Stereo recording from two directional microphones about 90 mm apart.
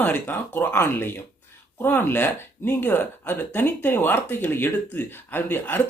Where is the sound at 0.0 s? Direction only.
20° left (ahead or behind).